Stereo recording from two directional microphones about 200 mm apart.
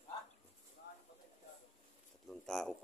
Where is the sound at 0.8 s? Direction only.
55° left (ahead or behind).